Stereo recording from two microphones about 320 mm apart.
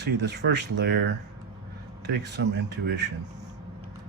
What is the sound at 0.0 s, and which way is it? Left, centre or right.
Speech, right.